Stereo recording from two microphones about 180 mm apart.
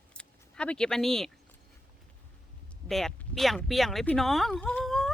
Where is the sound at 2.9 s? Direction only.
Centre (ahead or behind).